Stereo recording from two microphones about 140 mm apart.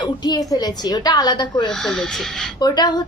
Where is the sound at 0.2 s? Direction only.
30° left (ahead or behind).